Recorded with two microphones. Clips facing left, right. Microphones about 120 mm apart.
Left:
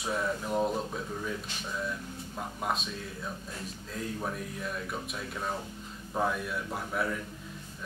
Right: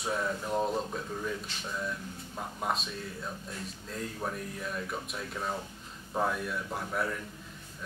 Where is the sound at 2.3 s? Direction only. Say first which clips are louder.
Even; centre (ahead or behind).